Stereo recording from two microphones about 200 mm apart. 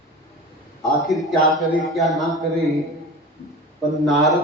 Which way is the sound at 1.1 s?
Centre (ahead or behind).